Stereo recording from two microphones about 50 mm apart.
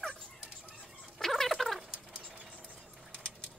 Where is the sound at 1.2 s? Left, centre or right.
Centre.